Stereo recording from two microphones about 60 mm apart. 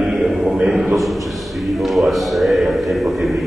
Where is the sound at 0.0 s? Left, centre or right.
Centre.